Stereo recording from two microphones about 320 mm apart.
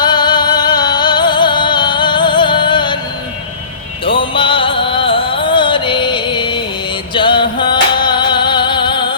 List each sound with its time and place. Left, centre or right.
0.0 s music: centre
4.0 s music: centre